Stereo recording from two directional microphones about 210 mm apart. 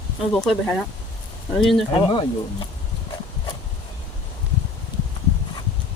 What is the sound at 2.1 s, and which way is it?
Speech, 25° left (ahead or behind).